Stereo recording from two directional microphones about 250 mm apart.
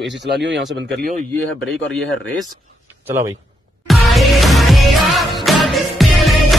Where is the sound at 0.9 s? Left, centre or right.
Right.